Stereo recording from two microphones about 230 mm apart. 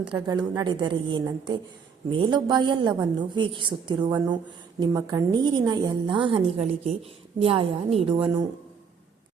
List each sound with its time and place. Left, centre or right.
0.1 s a woman's voice: centre